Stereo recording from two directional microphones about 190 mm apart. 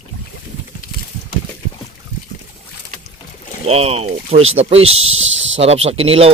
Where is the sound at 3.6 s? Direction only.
35° right (ahead or behind).